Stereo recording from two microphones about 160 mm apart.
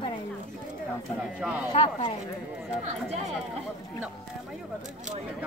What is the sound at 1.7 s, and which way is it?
Speech, 35° left (ahead or behind).